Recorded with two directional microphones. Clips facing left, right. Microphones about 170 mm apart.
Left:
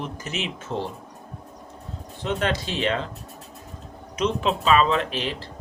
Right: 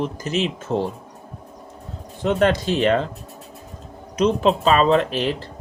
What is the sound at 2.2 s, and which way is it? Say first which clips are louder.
Speech: right 7 dB; 45° right (ahead or behind).